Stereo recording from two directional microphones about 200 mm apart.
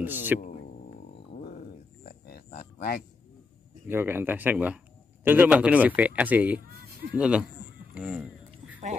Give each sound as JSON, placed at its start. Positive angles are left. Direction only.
{"t": 0.0, "sound": "speech", "side_deg": -10}
{"t": 1.4, "sound": "wild animals", "side_deg": 45}
{"t": 3.8, "sound": "speech", "side_deg": -10}
{"t": 7.9, "sound": "a sound", "side_deg": -5}